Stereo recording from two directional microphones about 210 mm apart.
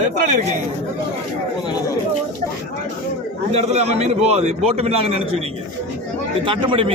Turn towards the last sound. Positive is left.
turn(degrees=-25)  # may be behind; listen again after turning